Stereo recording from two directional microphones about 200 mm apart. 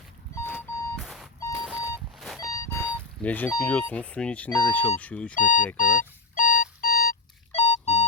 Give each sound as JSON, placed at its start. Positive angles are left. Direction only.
{"t": 0.3, "sound": "alarm clock", "side_deg": 10}
{"t": 1.5, "sound": "a sound", "side_deg": -5}
{"t": 2.4, "sound": "speech", "side_deg": 15}
{"t": 5.3, "sound": "speech", "side_deg": 40}
{"t": 5.7, "sound": "alarm clock", "side_deg": 40}
{"t": 7.5, "sound": "beep", "side_deg": 30}